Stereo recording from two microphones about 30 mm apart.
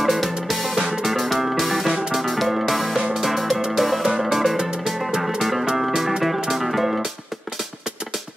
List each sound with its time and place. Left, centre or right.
0.0 s music: centre
0.7 s music: centre